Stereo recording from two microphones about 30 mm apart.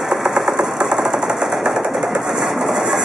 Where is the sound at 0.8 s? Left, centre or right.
Right.